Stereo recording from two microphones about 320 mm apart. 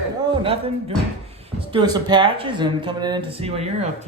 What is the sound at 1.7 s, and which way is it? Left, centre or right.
Speech, centre.